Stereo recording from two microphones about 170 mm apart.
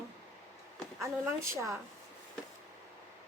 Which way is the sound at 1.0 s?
15° right (ahead or behind).